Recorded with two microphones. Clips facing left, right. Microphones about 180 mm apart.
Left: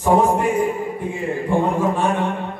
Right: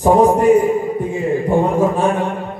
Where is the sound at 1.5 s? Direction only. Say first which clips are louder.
Right 3 dB; 40° right (ahead or behind).